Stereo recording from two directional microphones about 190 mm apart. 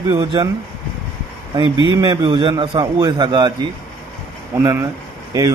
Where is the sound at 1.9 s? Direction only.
25° right (ahead or behind).